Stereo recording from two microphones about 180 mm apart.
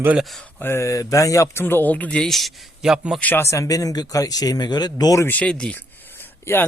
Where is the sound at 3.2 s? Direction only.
10° left (ahead or behind).